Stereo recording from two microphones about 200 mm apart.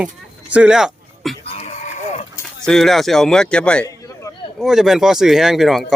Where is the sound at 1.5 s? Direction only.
35° left (ahead or behind).